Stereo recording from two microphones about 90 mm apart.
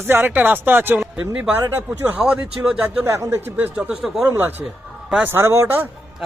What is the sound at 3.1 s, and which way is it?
Speech, 30° right (ahead or behind).